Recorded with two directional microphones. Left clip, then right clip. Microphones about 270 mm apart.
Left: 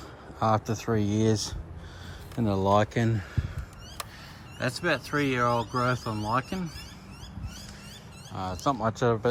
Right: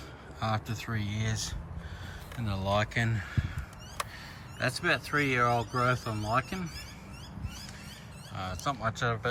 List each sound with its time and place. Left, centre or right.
0.4 s speech: centre
4.6 s speech: centre
8.4 s speech: centre